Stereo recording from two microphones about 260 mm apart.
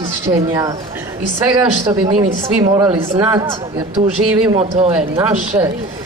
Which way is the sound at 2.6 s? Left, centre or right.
Centre.